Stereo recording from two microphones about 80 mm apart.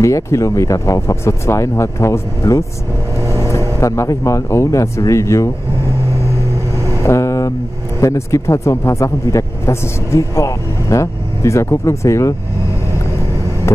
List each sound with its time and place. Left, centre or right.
0.0 s speech: left
7.0 s vehicle: left
8.0 s speech: left